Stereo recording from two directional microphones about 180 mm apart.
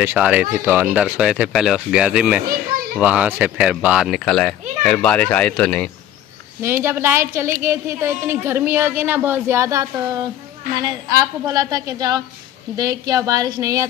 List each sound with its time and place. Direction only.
0.0 s a child's voice: 5° right (ahead or behind)
6.6 s a woman's voice: 15° right (ahead or behind)